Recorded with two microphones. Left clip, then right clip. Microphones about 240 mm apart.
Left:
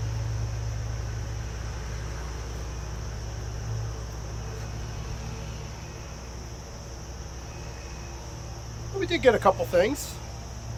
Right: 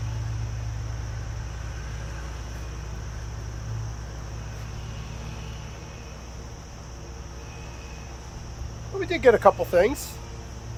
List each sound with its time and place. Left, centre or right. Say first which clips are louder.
9.0 s speech: right 3 dB; centre